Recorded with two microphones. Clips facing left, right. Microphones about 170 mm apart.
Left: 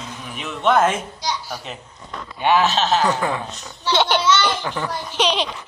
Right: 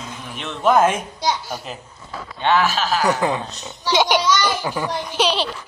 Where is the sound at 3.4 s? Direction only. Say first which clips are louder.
Right 1 dB; 30° right (ahead or behind).